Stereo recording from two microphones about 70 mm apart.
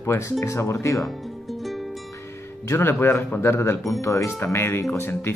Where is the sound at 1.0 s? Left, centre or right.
Centre.